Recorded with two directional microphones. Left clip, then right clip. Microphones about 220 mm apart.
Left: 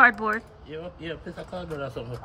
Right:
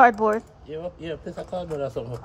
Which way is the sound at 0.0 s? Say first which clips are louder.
Right 2 dB; 30° right (ahead or behind).